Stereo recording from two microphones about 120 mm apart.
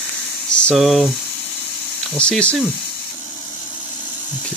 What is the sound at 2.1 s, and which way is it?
Speech, 10° left (ahead or behind).